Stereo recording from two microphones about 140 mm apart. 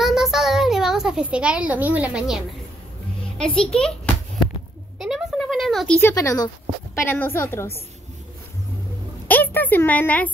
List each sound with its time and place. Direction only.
0.0 s a sound: 5° right (ahead or behind)
3.3 s a child's voice: 5° left (ahead or behind)
5.0 s a sound: centre (ahead or behind)
6.1 s speech: 25° left (ahead or behind)
7.1 s a child's voice: 15° left (ahead or behind)
9.3 s a woman's voice: 15° left (ahead or behind)